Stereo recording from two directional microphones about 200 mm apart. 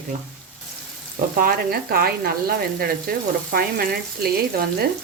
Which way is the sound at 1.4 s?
50° right (ahead or behind).